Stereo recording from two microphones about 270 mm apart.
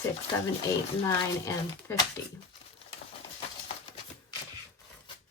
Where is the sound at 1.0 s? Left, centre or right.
Centre.